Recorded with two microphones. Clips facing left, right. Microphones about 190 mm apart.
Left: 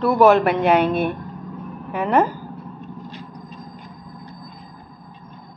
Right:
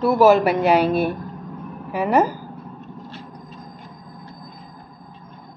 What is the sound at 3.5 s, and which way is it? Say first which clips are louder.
Train: left 1 dB; 15° left (ahead or behind).